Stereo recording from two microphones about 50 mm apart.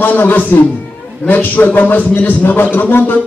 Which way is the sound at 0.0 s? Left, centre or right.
Left.